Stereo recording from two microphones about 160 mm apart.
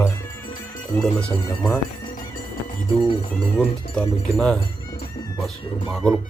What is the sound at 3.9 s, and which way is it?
Speech, 5° left (ahead or behind).